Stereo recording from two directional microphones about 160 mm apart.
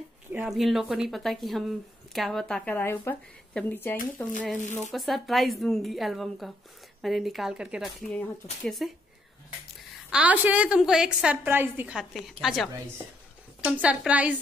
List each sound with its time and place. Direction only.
0.3 s a woman's voice: 5° right (ahead or behind); by 4.3 s 10° left (ahead or behind)
4.6 s speech: 50° left (ahead or behind)
4.9 s a woman's voice: centre (ahead or behind)
10.1 s a woman's voice: 10° right (ahead or behind)
13.7 s a woman's voice: 5° right (ahead or behind)